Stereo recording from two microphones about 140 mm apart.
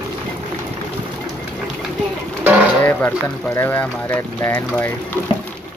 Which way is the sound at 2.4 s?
10° right (ahead or behind).